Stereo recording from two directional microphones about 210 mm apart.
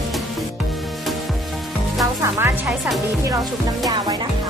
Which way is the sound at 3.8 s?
20° right (ahead or behind).